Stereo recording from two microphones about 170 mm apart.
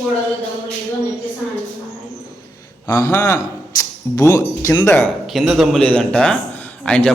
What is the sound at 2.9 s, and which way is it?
Speech, 20° left (ahead or behind).